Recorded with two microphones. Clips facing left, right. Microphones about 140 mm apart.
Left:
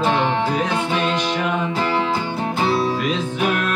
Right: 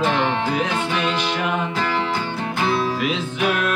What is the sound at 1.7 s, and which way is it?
Music, 25° left (ahead or behind).